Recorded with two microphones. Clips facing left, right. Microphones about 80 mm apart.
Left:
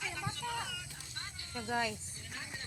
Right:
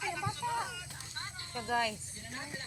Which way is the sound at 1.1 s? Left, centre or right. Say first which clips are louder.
Right 3 dB; right.